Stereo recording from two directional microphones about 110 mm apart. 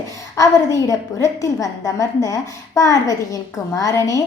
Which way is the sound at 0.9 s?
30° left (ahead or behind).